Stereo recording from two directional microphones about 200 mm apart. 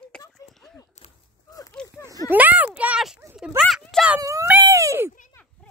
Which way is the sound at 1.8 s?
5° left (ahead or behind).